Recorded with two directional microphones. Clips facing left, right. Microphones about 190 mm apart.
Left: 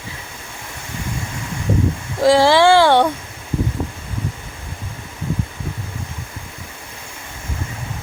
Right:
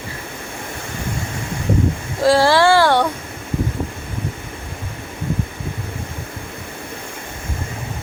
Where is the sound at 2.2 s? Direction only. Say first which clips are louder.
Left 1 dB; 20° left (ahead or behind).